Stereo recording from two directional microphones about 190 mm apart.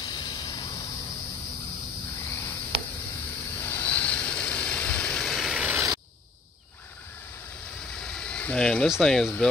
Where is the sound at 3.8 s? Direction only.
5° left (ahead or behind).